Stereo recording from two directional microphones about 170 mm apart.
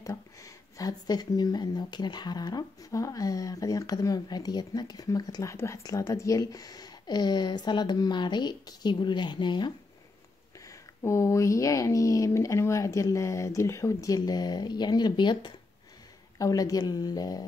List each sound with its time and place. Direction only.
0.0 s speech: 20° left (ahead or behind)
10.7 s speech: 15° left (ahead or behind)